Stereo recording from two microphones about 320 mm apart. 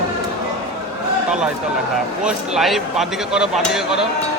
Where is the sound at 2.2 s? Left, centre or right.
Centre.